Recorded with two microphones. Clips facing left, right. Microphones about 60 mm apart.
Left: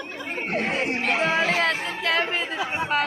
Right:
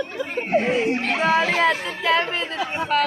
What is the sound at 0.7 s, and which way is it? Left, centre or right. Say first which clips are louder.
Speech: right 5 dB; left.